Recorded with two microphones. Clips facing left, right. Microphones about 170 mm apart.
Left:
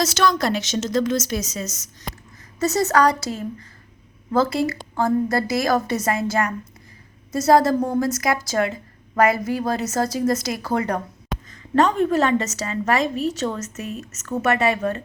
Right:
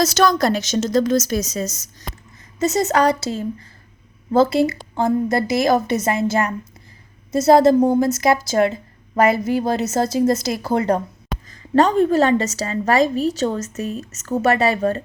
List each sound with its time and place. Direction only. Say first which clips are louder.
0.0 s a woman's voice: right 4 dB; 40° right (ahead or behind)
2.6 s a woman's voice: right 1 dB; 20° right (ahead or behind)